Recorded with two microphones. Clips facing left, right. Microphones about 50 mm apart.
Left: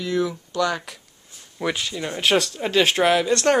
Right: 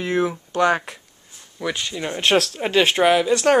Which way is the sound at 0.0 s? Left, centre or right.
Right.